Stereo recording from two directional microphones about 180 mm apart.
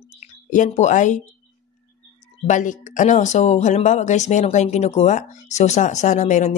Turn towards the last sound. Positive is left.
turn(degrees=40)  # may be behind; listen again after turning